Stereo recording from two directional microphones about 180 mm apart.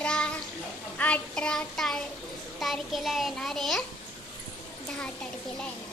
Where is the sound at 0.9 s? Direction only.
5° left (ahead or behind).